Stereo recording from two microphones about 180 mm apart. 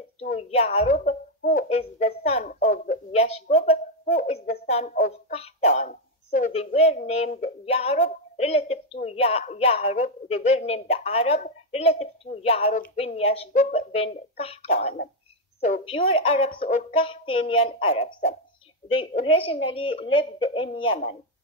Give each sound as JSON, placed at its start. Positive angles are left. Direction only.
{"t": 0.4, "sound": "a woman's voice", "side_deg": 35}
{"t": 13.5, "sound": "a woman's voice", "side_deg": 45}